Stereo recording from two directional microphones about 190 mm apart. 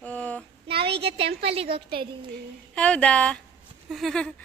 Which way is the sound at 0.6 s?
30° right (ahead or behind).